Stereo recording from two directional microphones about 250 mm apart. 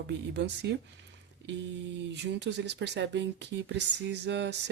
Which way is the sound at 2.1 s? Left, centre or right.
Right.